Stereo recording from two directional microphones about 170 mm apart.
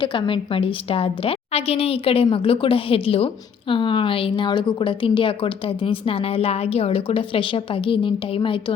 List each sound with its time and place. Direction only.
0.0 s a woman's voice: 30° left (ahead or behind)